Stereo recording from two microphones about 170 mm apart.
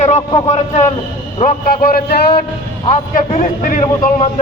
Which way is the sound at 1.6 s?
60° left (ahead or behind).